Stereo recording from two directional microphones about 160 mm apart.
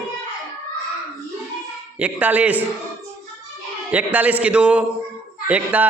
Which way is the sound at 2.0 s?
10° right (ahead or behind).